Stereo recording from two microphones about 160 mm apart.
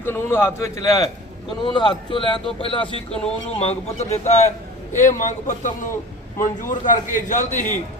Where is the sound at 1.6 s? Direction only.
30° left (ahead or behind).